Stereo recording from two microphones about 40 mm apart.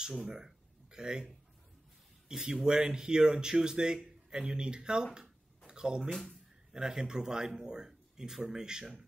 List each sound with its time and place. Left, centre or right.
0.2 s speech: centre
2.2 s speech: centre
4.4 s speech: right
5.7 s a sound: centre
6.2 s speech: centre